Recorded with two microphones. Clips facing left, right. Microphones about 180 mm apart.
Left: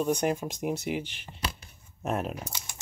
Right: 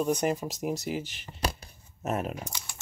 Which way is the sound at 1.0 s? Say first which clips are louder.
Right 3 dB; 45° right (ahead or behind).